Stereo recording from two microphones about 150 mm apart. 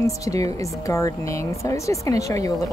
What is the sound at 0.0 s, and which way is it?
Speech, 20° left (ahead or behind).